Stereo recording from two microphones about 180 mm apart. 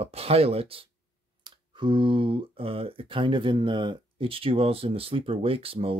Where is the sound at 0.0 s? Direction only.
35° right (ahead or behind).